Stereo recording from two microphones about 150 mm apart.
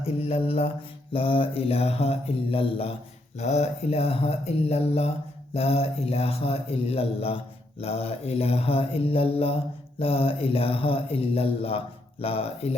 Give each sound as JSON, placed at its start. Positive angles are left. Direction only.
{"t": 0.0, "sound": "mantra", "side_deg": 40}
{"t": 3.3, "sound": "speech", "side_deg": 50}
{"t": 5.5, "sound": "mantra", "side_deg": 40}